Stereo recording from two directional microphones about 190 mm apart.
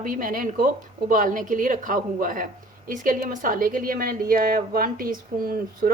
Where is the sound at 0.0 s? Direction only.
45° right (ahead or behind).